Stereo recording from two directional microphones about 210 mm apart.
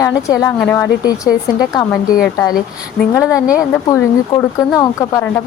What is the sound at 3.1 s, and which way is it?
A woman's voice, 15° left (ahead or behind).